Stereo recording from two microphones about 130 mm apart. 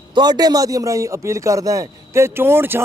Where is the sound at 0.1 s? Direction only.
35° right (ahead or behind).